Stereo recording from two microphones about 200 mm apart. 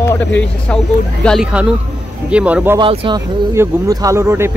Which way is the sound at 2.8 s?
25° right (ahead or behind).